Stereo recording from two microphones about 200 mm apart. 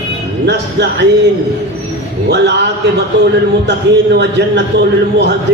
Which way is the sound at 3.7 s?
60° right (ahead or behind).